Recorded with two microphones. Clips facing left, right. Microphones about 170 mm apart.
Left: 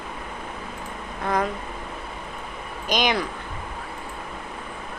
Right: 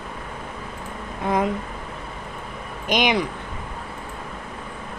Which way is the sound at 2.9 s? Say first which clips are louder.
Right 2 dB; 20° right (ahead or behind).